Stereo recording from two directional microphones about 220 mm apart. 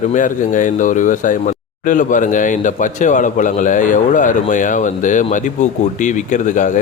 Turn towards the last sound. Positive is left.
turn(degrees=35)  # may be behind; listen again after turning